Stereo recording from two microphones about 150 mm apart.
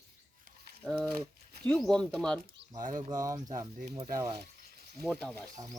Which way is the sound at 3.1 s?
25° right (ahead or behind).